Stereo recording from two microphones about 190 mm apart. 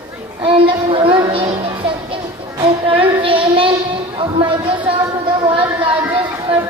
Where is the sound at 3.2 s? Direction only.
30° right (ahead or behind).